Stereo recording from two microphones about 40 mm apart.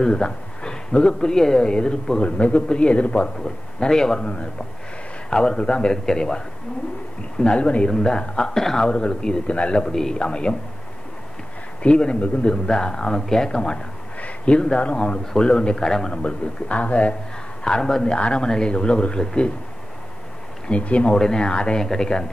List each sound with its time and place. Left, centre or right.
0.0 s a man's voice: centre
3.4 s a man's voice: centre
11.8 s a man's voice: left
14.2 s a sound: left
14.8 s a man's voice: left
17.6 s speech: centre
18.1 s speech: left
20.6 s speech: left
21.1 s a man's voice: centre